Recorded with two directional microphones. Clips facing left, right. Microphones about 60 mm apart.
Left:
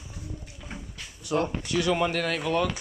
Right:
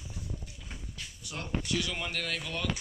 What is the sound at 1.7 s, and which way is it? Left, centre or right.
Speech, left.